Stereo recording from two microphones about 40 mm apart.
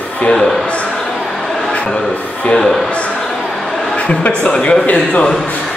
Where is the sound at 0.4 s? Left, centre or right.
Centre.